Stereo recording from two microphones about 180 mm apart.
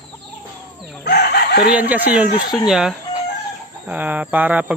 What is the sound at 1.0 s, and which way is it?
Chicken, 65° left (ahead or behind).